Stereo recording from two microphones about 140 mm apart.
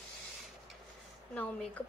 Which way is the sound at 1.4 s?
10° left (ahead or behind).